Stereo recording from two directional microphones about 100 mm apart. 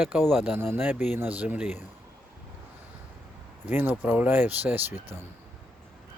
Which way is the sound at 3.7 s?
20° right (ahead or behind).